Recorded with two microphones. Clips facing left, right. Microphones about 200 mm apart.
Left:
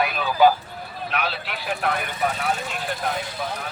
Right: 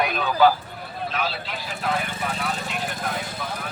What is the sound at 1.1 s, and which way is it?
Speech, 65° left (ahead or behind).